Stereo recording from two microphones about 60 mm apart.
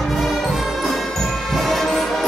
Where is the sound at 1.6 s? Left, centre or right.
Centre.